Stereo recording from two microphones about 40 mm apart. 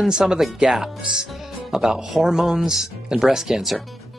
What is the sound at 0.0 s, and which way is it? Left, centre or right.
Speech, centre.